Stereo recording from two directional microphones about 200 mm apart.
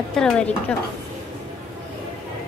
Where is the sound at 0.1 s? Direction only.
5° left (ahead or behind).